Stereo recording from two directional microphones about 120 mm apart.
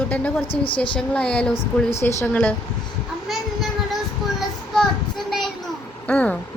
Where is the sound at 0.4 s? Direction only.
45° left (ahead or behind).